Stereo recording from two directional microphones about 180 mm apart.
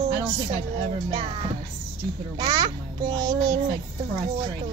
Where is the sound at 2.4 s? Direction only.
25° right (ahead or behind).